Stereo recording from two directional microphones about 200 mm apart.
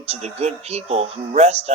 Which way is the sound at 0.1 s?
30° right (ahead or behind).